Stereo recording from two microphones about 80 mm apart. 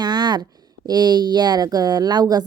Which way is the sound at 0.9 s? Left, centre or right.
Right.